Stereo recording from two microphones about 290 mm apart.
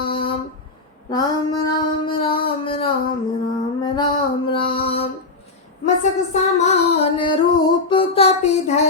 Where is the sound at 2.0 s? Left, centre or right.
Centre.